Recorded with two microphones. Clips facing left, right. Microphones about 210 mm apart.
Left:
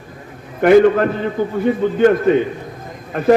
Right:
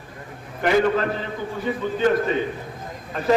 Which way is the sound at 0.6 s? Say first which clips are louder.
Left 9 dB; 55° left (ahead or behind).